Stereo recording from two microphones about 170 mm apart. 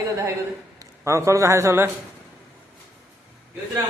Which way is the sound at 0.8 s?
15° right (ahead or behind).